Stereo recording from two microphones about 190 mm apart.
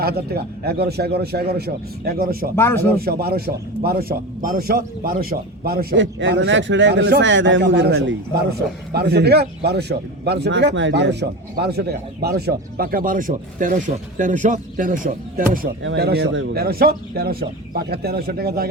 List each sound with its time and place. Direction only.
0.0 s a man's voice: 55° right (ahead or behind)
2.6 s speech: 10° left (ahead or behind)
3.0 s speech: 55° right (ahead or behind)
6.0 s a man's voice: 75° right (ahead or behind); by 15.7 s 50° right (ahead or behind)
15.8 s speech: 90° right
16.0 s a man's voice: 60° right (ahead or behind)